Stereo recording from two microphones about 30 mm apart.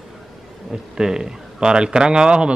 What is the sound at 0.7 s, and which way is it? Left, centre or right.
Speech, right.